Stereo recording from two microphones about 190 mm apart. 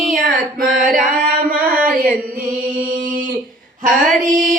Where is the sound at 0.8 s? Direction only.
45° right (ahead or behind).